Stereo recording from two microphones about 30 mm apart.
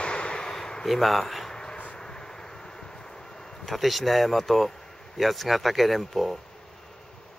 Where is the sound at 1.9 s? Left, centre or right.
Left.